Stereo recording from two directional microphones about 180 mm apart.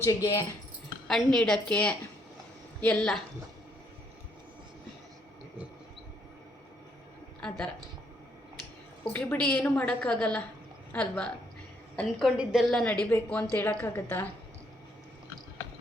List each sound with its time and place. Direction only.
0.0 s speech: 20° left (ahead or behind)
1.0 s a woman's voice: 5° left (ahead or behind)
7.4 s speech: 5° left (ahead or behind)
9.1 s a woman's voice: 10° left (ahead or behind)